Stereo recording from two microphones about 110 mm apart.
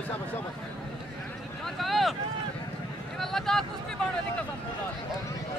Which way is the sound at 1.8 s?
Centre (ahead or behind).